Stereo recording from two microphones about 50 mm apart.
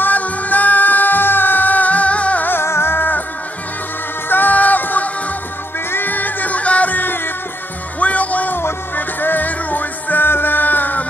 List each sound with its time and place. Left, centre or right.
0.0 s music: left
2.4 s music: left
4.3 s music: left
8.5 s music: left